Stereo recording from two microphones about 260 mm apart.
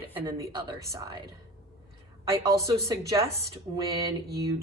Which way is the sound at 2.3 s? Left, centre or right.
Centre.